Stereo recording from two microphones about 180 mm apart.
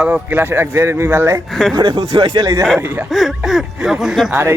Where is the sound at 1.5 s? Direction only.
Centre (ahead or behind).